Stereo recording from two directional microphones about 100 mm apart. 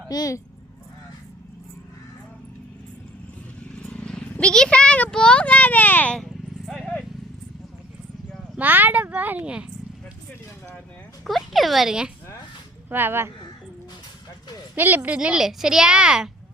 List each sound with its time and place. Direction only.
0.1 s speech: 40° left (ahead or behind)
3.8 s vehicle: 10° left (ahead or behind)
5.1 s a child's voice: 10° left (ahead or behind)
6.1 s vehicle: centre (ahead or behind)
8.5 s speech: 20° right (ahead or behind)
11.3 s speech: centre (ahead or behind)
12.9 s speech: 20° right (ahead or behind)
14.8 s speech: 20° right (ahead or behind)